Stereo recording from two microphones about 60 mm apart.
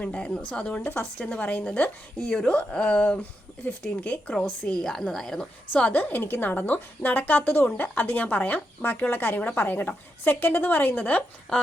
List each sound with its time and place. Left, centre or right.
0.0 s a woman's voice: centre
4.7 s a woman's voice: centre
5.7 s a woman's voice: left
11.5 s a woman's voice: centre